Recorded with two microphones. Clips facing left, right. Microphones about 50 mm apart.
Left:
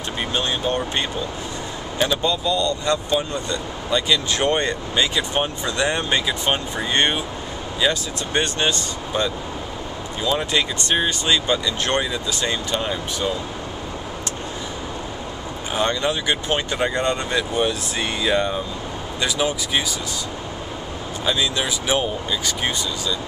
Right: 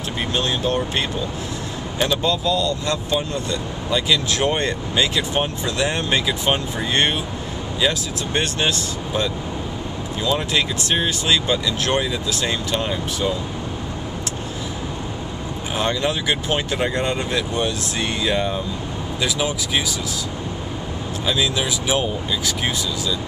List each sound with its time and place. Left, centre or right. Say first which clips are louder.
0.3 s speech: right 1 dB; centre
15.7 s speech: left 1 dB; centre
21.3 s speech: right 1 dB; centre